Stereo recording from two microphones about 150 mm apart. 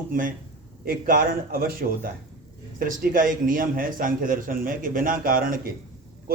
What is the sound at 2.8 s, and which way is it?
A man's voice, 70° right (ahead or behind).